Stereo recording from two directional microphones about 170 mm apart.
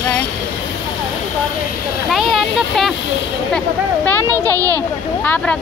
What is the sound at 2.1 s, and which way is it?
Speech, centre (ahead or behind).